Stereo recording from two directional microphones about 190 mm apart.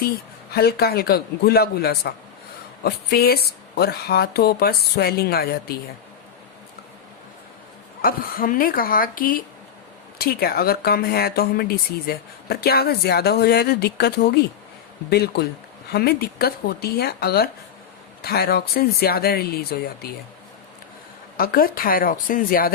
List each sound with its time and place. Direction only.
0.5 s speech: 55° left (ahead or behind)
8.0 s speech: 50° left (ahead or behind)
21.3 s speech: 50° left (ahead or behind)